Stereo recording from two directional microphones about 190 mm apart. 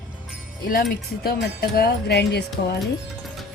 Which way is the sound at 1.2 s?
55° left (ahead or behind).